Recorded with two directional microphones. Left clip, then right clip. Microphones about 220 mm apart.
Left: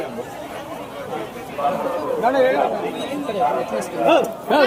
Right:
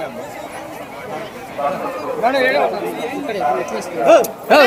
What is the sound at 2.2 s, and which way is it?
Speech, 55° right (ahead or behind).